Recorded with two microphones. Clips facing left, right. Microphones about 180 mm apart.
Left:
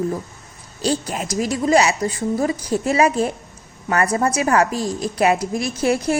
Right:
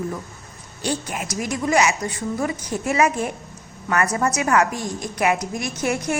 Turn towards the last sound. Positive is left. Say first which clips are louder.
# left 4 dB
turn(degrees=30)  # may be behind; listen again after turning